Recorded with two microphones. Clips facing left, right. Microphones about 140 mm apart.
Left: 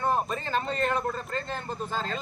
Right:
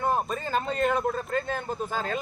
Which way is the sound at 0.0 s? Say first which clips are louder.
Right 1 dB; 5° right (ahead or behind).